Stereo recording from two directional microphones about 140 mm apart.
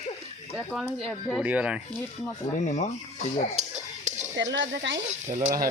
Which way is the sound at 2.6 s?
55° left (ahead or behind).